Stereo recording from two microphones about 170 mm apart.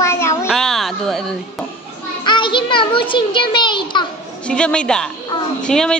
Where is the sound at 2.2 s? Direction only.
30° left (ahead or behind).